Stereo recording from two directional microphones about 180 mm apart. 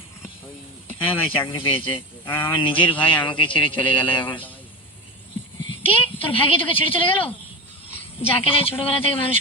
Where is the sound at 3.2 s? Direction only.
25° left (ahead or behind).